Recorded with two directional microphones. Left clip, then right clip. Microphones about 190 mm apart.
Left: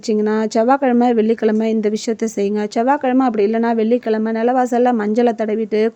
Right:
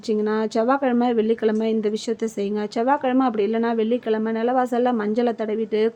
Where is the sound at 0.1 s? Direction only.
35° left (ahead or behind).